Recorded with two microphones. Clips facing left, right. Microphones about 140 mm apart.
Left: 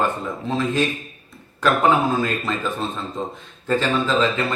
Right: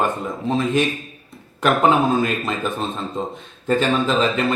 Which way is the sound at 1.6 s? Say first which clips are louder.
Right 1 dB; 20° right (ahead or behind).